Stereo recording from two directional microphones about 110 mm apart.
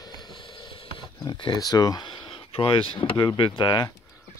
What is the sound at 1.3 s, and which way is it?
Speech, 45° left (ahead or behind).